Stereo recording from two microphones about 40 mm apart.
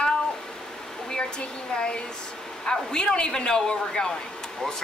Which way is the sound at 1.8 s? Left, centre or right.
Left.